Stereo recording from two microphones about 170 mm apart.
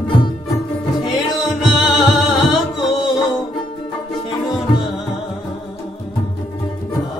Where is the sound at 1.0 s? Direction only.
25° left (ahead or behind).